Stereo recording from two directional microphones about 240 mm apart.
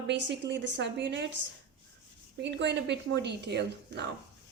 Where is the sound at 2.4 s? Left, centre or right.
Right.